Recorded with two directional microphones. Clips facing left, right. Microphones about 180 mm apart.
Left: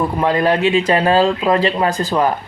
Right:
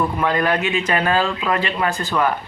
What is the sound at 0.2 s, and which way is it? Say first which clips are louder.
Speech: left 4 dB; 30° left (ahead or behind).